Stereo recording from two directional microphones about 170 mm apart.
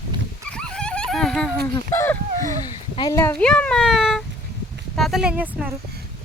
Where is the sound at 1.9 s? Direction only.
15° left (ahead or behind).